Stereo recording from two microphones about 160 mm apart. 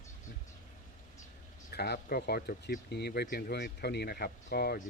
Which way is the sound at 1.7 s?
90° left.